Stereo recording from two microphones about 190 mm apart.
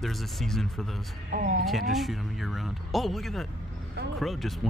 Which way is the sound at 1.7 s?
Centre (ahead or behind).